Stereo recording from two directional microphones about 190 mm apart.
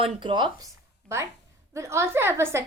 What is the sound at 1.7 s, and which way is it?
Speech, 15° right (ahead or behind).